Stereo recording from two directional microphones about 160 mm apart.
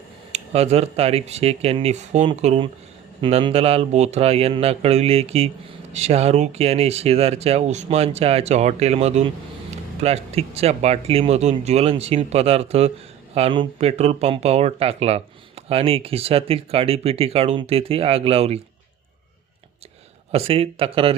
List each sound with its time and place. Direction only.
0.3 s speech: 40° right (ahead or behind)
20.3 s speech: 35° right (ahead or behind)